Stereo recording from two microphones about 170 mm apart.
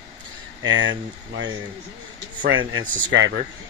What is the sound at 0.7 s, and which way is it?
Speech, 90° right.